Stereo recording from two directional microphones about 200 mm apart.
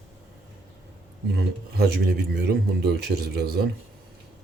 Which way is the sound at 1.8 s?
50° right (ahead or behind).